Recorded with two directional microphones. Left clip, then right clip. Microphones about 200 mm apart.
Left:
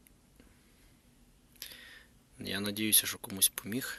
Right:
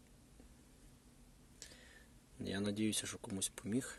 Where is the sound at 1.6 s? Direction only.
5° right (ahead or behind).